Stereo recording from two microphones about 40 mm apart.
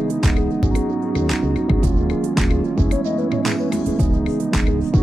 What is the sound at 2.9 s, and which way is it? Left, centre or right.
Music, left.